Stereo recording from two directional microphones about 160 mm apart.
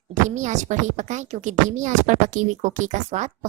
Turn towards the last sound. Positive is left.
turn(degrees=-50)  # may be behind; listen again after turning